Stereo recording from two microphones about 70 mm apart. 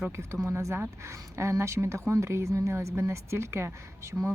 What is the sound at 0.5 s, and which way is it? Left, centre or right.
Speech, right.